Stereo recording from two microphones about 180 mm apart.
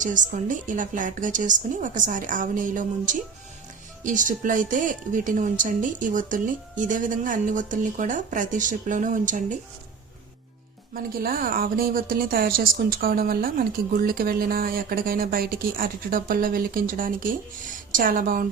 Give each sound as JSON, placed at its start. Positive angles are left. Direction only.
{"t": 0.0, "sound": "a woman's voice", "side_deg": -45}
{"t": 10.9, "sound": "a woman's voice", "side_deg": -55}